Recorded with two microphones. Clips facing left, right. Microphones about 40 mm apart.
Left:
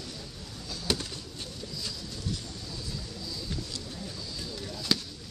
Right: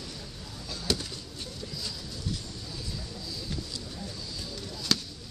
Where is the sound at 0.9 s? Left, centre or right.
Left.